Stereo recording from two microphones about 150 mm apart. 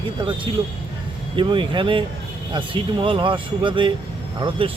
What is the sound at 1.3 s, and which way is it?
Speech, 35° right (ahead or behind).